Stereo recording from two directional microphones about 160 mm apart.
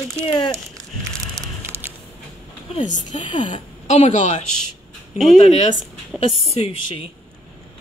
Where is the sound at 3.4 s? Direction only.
45° left (ahead or behind).